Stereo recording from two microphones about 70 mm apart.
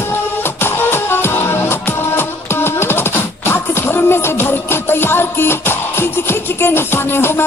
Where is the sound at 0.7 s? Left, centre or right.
Left.